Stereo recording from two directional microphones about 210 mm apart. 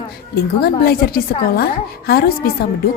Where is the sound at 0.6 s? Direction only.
45° left (ahead or behind).